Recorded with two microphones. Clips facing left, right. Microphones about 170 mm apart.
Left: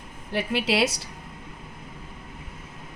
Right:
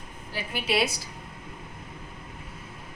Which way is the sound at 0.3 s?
85° left.